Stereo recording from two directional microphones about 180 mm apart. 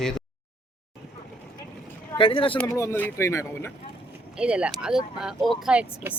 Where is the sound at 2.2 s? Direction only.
30° left (ahead or behind).